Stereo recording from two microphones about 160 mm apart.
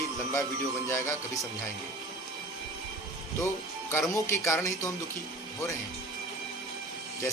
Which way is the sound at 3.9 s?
20° left (ahead or behind).